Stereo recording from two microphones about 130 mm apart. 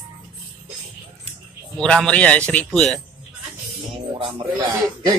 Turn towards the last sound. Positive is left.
turn(degrees=-45)  # may be behind; listen again after turning